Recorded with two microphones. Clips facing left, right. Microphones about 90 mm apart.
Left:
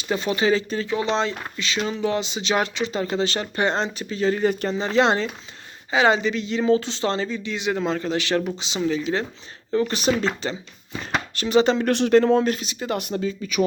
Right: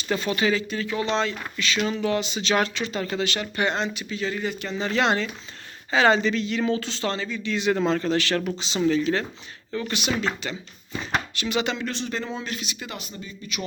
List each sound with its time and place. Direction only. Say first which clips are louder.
0.0 s speech: left 2 dB; 20° left (ahead or behind); by 4.8 s 40° left (ahead or behind)
4.8 s speech: left 2 dB; 25° left (ahead or behind)
5.9 s speech: left 1 dB; 15° left (ahead or behind)
8.8 s speech: right 2 dB; 5° left (ahead or behind)
9.7 s speech: left 6 dB; 35° left (ahead or behind)
11.9 s speech: left 13 dB; 60° left (ahead or behind); by 13.0 s 35° left (ahead or behind)
13.0 s speech: left 13 dB; 75° left (ahead or behind)